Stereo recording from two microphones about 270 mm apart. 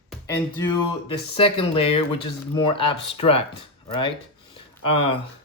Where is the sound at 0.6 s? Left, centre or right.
Centre.